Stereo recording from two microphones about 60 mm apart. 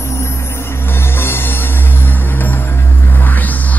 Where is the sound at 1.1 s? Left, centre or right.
Left.